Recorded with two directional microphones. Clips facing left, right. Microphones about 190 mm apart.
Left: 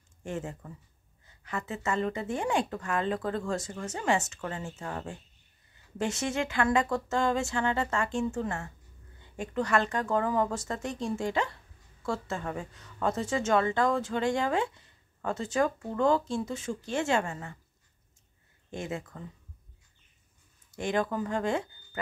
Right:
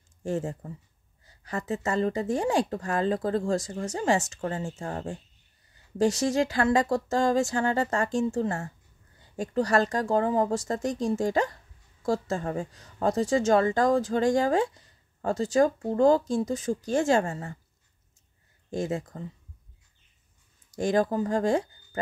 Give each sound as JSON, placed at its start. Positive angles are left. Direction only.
{"t": 0.2, "sound": "a woman's voice", "side_deg": -35}
{"t": 18.7, "sound": "a woman's voice", "side_deg": -35}
{"t": 20.7, "sound": "a woman's voice", "side_deg": -40}